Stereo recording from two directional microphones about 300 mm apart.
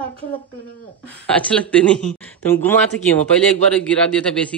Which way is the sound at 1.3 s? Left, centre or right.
Centre.